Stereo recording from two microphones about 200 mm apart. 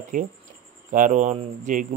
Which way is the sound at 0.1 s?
40° right (ahead or behind).